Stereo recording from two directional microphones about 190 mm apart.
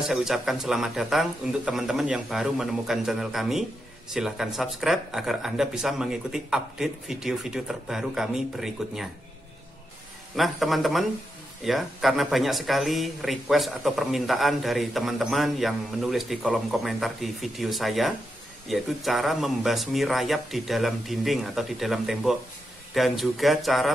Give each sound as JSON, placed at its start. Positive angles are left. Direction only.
{"t": 0.0, "sound": "speech", "side_deg": 0}
{"t": 10.3, "sound": "speech", "side_deg": 0}